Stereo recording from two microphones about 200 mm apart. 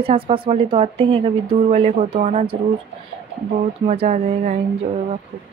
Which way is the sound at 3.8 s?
35° right (ahead or behind).